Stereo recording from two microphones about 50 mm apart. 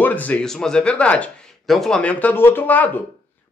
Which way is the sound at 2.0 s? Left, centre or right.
Left.